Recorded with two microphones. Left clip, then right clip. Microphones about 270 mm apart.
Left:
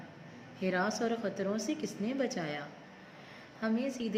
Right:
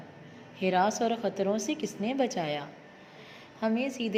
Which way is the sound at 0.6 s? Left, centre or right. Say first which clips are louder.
Right 6 dB; centre.